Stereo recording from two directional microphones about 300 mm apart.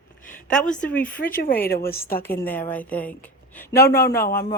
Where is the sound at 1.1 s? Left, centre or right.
Left.